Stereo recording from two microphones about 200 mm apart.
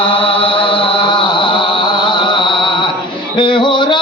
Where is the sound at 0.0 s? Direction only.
25° left (ahead or behind).